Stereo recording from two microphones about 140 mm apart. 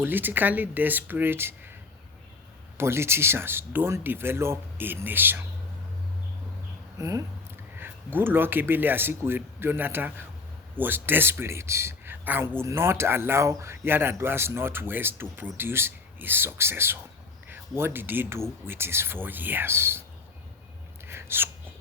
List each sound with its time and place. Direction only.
0.0 s speech: 15° right (ahead or behind)
2.7 s speech: 20° right (ahead or behind)
7.0 s speech: 20° right (ahead or behind)
21.1 s a sound: 15° right (ahead or behind)